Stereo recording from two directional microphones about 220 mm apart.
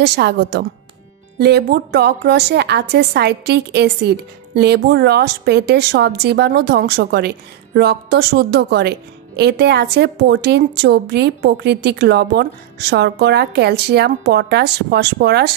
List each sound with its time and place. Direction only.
0.0 s a woman's voice: 50° right (ahead or behind)